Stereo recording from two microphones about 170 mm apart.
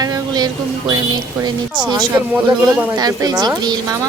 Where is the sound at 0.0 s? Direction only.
20° right (ahead or behind).